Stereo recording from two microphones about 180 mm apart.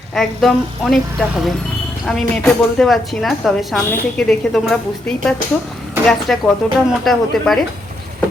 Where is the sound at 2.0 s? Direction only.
5° left (ahead or behind).